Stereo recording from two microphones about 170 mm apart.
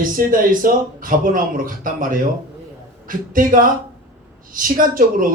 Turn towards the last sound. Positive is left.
turn(degrees=-55)  # may be behind; listen again after turning